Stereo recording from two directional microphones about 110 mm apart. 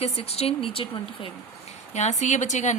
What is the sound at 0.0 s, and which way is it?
Speech, 65° left (ahead or behind).